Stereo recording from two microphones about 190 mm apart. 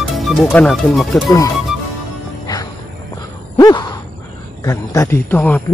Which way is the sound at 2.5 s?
20° left (ahead or behind).